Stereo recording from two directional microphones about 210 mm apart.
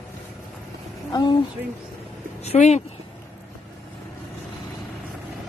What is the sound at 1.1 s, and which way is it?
Speech, 20° left (ahead or behind).